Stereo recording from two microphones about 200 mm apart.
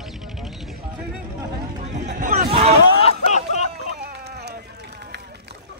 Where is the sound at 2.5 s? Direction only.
30° right (ahead or behind).